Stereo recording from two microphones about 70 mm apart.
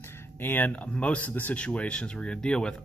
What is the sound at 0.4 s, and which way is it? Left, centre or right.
Speech, left.